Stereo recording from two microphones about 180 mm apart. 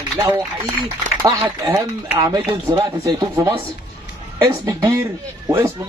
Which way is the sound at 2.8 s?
20° right (ahead or behind).